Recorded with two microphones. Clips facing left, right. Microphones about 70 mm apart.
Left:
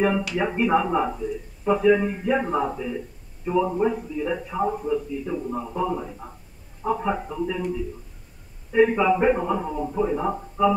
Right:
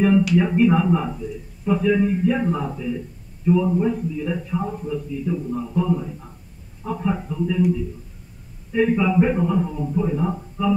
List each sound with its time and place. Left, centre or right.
0.4 s a man's voice: centre
8.7 s a man's voice: centre